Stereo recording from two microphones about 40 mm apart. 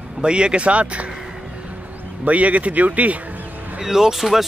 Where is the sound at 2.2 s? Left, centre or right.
Right.